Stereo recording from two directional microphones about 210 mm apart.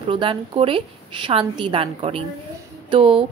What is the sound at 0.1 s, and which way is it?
A woman's voice, 25° right (ahead or behind).